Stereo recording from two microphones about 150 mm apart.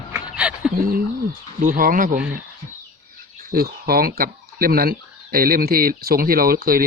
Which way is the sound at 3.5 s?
90° right.